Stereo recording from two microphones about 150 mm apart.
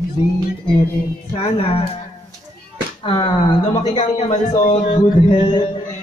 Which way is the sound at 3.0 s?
30° left (ahead or behind).